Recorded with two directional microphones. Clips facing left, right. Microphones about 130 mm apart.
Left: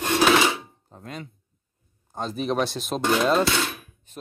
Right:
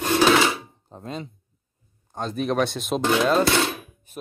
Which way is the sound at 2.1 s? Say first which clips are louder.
Right 1 dB; centre (ahead or behind).